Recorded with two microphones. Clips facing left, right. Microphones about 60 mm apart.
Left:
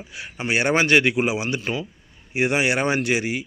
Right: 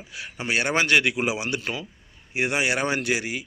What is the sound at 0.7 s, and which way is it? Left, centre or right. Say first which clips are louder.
Speech: left 4 dB; centre.